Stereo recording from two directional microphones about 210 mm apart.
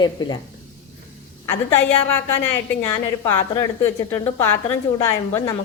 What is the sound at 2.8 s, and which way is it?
A woman's voice, 15° left (ahead or behind).